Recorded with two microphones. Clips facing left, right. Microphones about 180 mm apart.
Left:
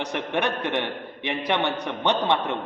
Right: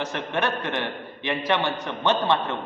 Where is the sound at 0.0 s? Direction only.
15° left (ahead or behind).